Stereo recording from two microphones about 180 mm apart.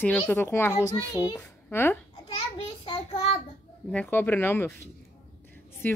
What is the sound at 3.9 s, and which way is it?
Speech, 10° left (ahead or behind).